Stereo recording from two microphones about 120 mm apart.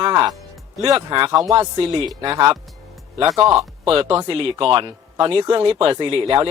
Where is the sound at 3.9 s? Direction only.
50° right (ahead or behind).